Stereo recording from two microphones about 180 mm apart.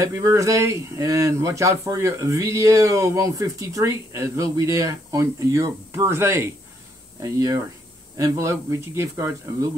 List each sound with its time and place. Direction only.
0.0 s speech: 15° right (ahead or behind)